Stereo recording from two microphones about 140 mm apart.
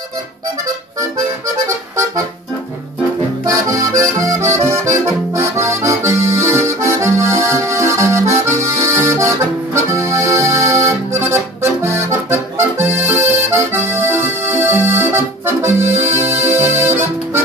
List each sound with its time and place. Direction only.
3.4 s accordion: 25° right (ahead or behind)